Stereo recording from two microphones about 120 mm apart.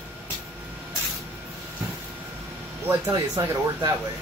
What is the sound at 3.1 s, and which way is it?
Speech, 30° right (ahead or behind).